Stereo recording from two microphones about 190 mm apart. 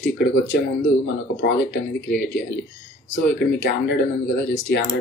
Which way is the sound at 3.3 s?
60° left (ahead or behind).